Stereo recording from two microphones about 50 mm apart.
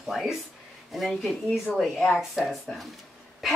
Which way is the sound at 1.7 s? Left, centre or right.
Left.